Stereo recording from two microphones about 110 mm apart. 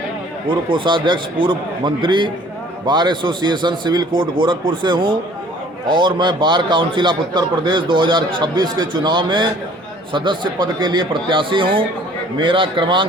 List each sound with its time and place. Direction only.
0.4 s a man's voice: 50° right (ahead or behind)